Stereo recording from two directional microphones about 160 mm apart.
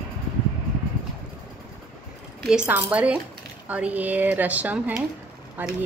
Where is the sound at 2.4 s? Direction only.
5° right (ahead or behind).